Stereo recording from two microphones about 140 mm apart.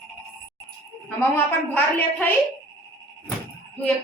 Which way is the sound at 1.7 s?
15° left (ahead or behind).